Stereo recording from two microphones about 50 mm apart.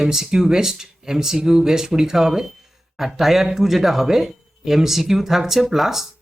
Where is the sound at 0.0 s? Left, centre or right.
Centre.